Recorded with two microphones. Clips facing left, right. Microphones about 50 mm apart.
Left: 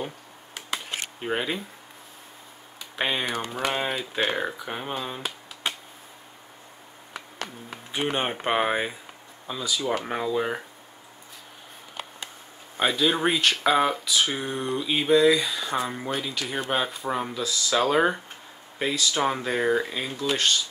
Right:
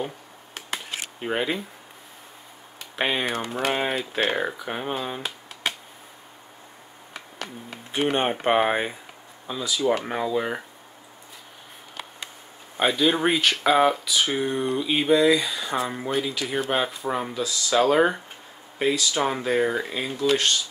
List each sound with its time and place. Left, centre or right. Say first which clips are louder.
1.2 s speech: right 2 dB; centre
3.0 s speech: right 2 dB; centre
3.4 s a sound: right 2 dB; right
4.3 s speech: right 2 dB; centre
7.9 s speech: right 4 dB; centre
12.7 s speech: right 2 dB; centre